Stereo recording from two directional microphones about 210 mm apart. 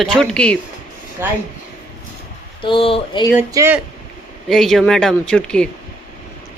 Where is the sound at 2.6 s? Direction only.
25° left (ahead or behind).